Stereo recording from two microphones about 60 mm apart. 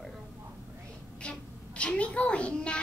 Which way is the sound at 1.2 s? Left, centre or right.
Centre.